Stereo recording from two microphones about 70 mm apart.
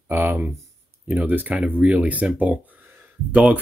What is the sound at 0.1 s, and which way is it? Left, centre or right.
Speech, right.